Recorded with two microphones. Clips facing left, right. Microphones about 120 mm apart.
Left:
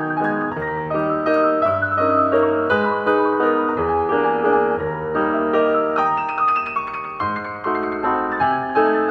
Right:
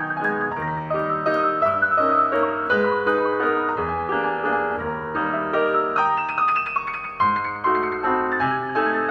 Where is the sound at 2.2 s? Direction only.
30° left (ahead or behind).